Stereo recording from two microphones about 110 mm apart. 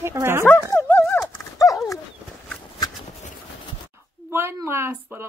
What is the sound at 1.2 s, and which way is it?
Horse, 30° left (ahead or behind).